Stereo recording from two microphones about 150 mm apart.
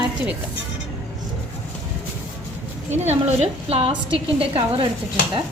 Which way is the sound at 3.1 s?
45° right (ahead or behind).